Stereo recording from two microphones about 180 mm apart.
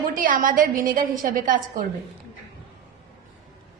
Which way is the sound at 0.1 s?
50° right (ahead or behind).